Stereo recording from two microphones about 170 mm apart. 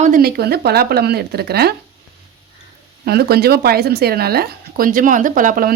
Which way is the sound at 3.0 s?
70° right (ahead or behind).